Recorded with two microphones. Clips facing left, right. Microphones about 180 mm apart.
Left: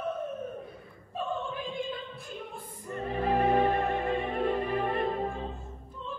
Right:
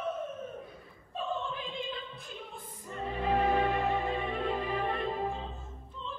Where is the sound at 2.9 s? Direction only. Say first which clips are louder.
Left 3 dB; 60° left (ahead or behind).